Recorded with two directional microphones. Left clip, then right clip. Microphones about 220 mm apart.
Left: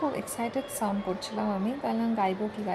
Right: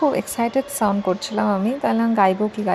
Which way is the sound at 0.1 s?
25° right (ahead or behind).